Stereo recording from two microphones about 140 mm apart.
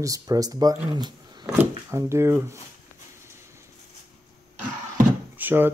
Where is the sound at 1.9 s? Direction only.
20° right (ahead or behind).